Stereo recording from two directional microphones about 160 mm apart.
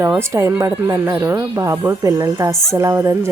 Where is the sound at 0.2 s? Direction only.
15° right (ahead or behind).